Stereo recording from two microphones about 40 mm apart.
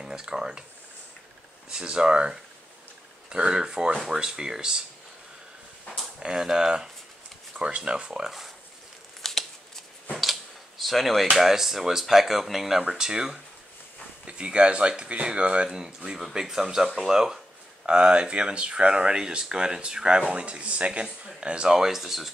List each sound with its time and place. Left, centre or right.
0.0 s speech: centre
1.7 s speech: right
6.1 s speech: centre
9.2 s a sound: centre
10.8 s speech: centre
12.8 s speech: centre
21.6 s speech: centre